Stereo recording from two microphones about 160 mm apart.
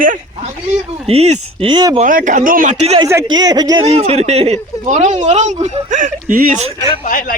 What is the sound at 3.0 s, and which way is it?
Speech, 20° right (ahead or behind).